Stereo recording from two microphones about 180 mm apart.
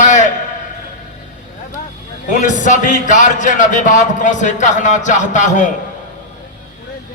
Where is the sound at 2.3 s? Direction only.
45° left (ahead or behind).